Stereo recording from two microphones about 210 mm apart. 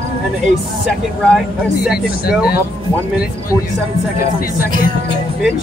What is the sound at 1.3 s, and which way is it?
Speech, 5° right (ahead or behind).